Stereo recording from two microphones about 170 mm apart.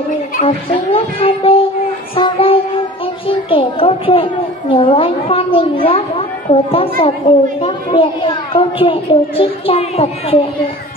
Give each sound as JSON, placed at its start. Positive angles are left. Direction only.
{"t": 0.5, "sound": "a woman's voice", "side_deg": 35}
{"t": 2.1, "sound": "a sound", "side_deg": 30}
{"t": 3.3, "sound": "a woman's voice", "side_deg": 30}